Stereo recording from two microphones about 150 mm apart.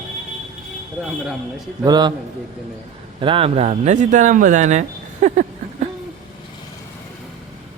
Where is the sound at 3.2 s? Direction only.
35° right (ahead or behind); by 5.9 s 50° right (ahead or behind).